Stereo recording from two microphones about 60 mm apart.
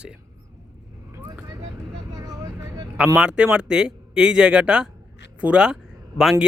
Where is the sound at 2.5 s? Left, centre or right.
Right.